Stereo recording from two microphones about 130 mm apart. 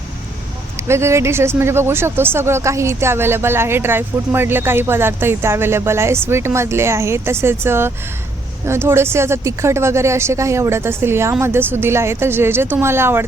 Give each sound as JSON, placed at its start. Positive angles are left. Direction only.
{"t": 0.8, "sound": "speech", "side_deg": -20}